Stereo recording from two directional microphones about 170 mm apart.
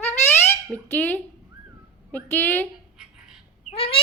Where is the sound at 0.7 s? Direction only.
10° left (ahead or behind).